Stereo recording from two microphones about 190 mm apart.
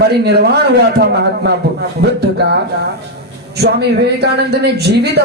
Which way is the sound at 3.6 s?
60° right (ahead or behind).